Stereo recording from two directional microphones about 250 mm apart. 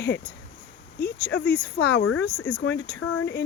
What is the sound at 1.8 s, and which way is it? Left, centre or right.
Speech, left.